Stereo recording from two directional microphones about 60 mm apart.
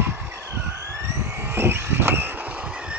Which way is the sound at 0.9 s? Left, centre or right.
Right.